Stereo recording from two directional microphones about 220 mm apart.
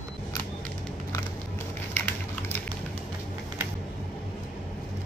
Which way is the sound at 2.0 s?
10° left (ahead or behind).